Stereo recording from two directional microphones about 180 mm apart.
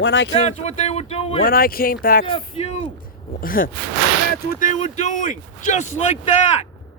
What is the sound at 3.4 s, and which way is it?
Speech, 50° left (ahead or behind).